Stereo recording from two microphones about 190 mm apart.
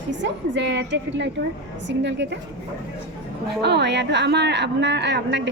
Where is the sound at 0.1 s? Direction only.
70° right (ahead or behind).